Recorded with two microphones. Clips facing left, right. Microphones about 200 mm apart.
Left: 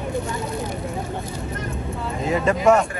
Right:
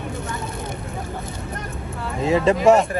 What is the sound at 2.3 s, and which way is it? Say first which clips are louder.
Speech: right 2 dB; 25° right (ahead or behind).